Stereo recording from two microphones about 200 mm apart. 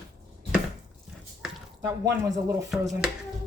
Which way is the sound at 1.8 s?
15° right (ahead or behind).